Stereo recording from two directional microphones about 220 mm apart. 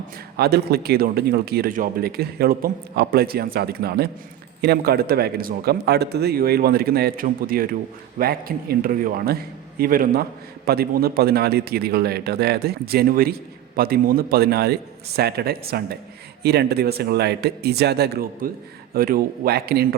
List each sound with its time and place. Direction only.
0.3 s a man's voice: 45° right (ahead or behind)